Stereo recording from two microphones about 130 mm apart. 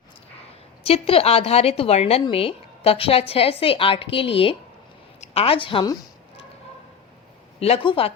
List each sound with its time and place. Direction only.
0.9 s a woman's voice: 50° left (ahead or behind)
7.6 s a woman's voice: 45° left (ahead or behind)